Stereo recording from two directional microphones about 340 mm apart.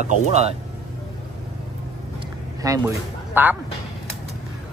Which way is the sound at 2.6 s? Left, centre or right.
Centre.